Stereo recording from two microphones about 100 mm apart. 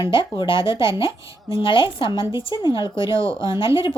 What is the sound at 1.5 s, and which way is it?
A woman's voice, 55° left (ahead or behind).